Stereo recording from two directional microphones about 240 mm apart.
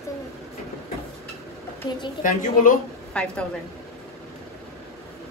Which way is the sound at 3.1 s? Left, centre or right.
Centre.